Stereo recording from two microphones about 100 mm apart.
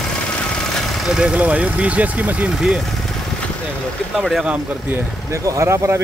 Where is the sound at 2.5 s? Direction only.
5° right (ahead or behind).